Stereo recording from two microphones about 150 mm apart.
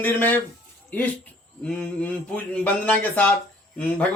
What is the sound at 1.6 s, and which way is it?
Speech, 5° left (ahead or behind).